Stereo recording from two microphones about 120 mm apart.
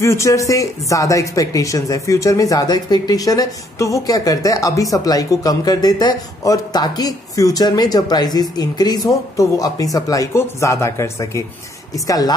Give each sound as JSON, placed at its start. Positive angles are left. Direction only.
{"t": 0.0, "sound": "a woman's voice", "side_deg": 25}